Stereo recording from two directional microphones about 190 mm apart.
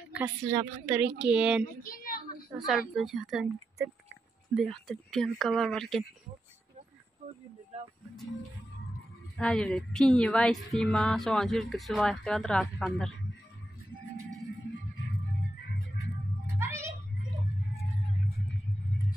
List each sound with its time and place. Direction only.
0.1 s a woman's voice: 10° right (ahead or behind)
1.6 s a child's voice: 45° left (ahead or behind)
2.6 s speech: centre (ahead or behind)
3.8 s a woman's voice: 10° right (ahead or behind)
4.6 s speech: centre (ahead or behind)
9.4 s speech: 5° left (ahead or behind)
16.5 s music: 15° right (ahead or behind)